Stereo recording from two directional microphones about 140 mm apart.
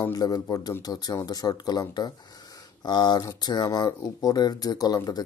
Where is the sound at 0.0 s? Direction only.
25° left (ahead or behind).